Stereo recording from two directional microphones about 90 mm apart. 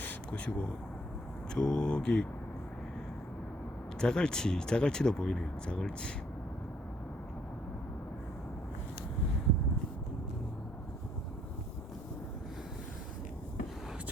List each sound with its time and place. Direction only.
0.0 s a sound: 15° left (ahead or behind)
1.5 s speech: 10° left (ahead or behind)
4.0 s speech: 10° left (ahead or behind)